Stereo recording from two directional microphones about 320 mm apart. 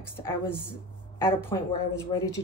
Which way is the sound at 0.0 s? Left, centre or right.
Centre.